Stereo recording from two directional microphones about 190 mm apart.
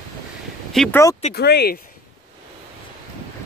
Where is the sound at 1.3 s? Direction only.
55° left (ahead or behind).